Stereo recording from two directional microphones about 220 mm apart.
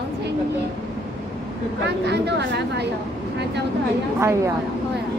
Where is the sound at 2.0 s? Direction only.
50° right (ahead or behind).